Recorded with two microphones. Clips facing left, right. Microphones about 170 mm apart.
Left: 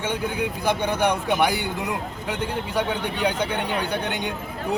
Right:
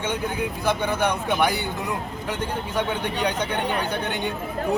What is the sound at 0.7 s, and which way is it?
A man's voice, 15° left (ahead or behind).